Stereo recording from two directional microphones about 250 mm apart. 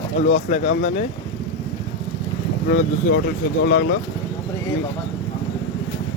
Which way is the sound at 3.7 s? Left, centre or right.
Left.